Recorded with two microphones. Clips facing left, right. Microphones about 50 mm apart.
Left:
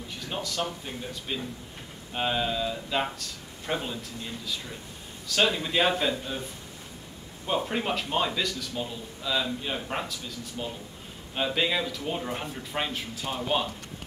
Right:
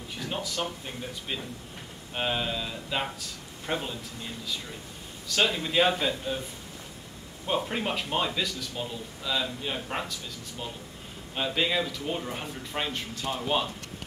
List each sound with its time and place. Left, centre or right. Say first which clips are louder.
0.3 s speech: left 1 dB; centre
5.3 s speech: left 1 dB; centre
7.4 s speech: left 1 dB; centre